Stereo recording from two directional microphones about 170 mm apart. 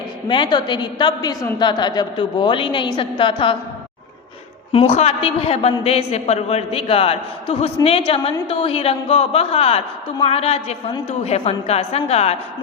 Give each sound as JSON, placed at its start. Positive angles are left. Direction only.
{"t": 0.3, "sound": "a woman's voice", "side_deg": 25}
{"t": 4.7, "sound": "a woman's voice", "side_deg": 35}